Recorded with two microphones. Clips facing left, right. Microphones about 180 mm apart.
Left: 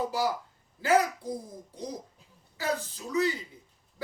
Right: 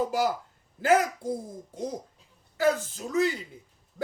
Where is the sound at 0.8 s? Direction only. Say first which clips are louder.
Right 2 dB; 50° right (ahead or behind).